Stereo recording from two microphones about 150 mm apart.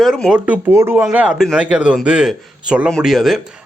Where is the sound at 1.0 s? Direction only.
5° right (ahead or behind).